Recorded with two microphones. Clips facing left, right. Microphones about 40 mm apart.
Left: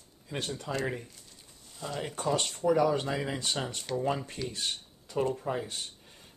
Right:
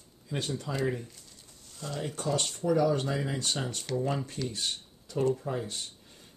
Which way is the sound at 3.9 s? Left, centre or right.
Centre.